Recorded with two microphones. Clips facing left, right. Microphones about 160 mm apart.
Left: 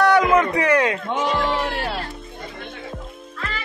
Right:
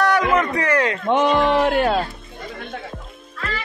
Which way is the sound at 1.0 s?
75° right (ahead or behind).